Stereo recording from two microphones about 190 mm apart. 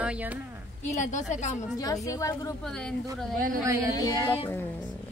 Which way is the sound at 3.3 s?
45° right (ahead or behind).